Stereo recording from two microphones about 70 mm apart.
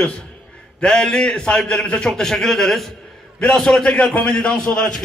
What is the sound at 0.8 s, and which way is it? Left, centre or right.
A man's voice, centre.